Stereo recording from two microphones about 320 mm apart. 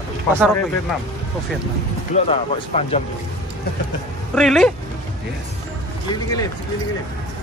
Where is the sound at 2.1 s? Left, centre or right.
Centre.